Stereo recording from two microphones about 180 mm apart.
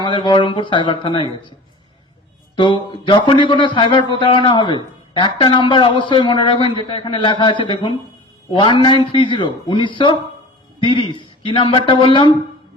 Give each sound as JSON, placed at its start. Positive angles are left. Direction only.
{"t": 0.0, "sound": "speech", "side_deg": 25}
{"t": 2.6, "sound": "speech", "side_deg": 25}